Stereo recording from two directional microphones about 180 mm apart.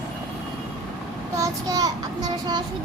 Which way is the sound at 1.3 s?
20° right (ahead or behind).